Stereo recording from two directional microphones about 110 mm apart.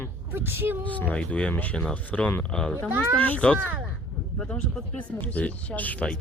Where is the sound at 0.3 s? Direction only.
20° right (ahead or behind).